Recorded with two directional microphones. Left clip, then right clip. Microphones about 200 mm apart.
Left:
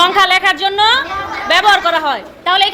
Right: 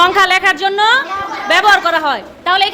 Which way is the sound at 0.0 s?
35° right (ahead or behind).